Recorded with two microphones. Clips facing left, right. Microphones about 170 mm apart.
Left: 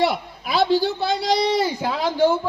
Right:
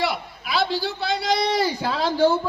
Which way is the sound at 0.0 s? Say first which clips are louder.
Left 4 dB; 45° left (ahead or behind).